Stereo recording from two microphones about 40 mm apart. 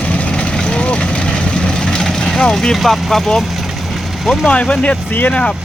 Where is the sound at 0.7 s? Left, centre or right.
Left.